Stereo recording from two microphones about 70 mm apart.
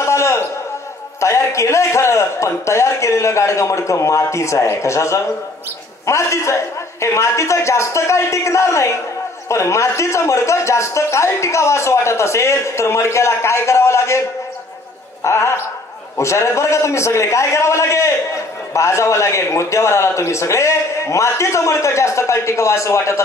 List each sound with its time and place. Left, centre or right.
0.0 s a sound: left
1.2 s a man's voice: left
15.2 s a man's voice: left